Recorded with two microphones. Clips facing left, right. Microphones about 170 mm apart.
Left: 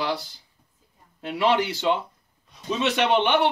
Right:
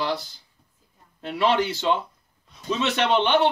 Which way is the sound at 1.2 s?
15° left (ahead or behind).